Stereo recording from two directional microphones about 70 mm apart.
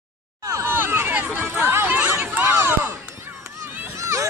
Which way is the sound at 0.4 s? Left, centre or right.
Right.